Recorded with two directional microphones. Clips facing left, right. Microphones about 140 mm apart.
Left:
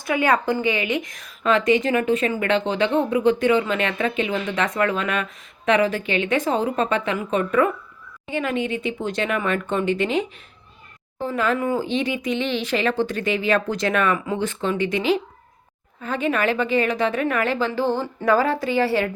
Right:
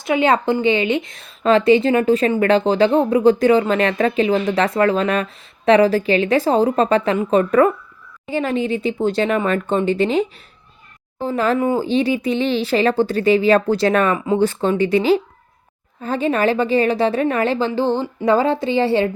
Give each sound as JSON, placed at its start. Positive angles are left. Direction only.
{"t": 0.0, "sound": "a woman's voice", "side_deg": -25}